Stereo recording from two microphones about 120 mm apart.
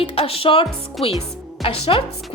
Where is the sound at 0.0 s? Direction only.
55° left (ahead or behind).